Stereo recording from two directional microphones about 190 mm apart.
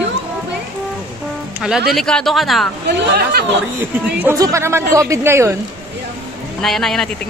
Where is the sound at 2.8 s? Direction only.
60° right (ahead or behind).